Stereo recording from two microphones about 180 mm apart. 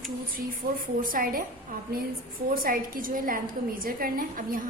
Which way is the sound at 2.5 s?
55° right (ahead or behind).